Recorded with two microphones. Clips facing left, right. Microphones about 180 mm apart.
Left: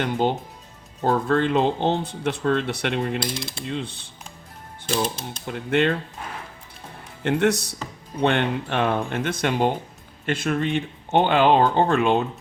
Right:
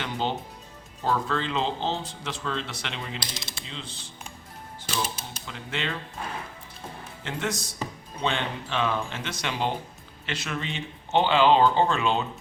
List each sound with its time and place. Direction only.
0.0 s speech: 50° left (ahead or behind)
5.0 s speech: 5° right (ahead or behind)
5.5 s speech: 55° left (ahead or behind)
7.2 s speech: 60° left (ahead or behind)